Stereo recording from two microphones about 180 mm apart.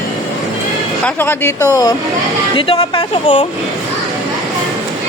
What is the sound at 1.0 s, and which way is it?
Speech, 10° left (ahead or behind).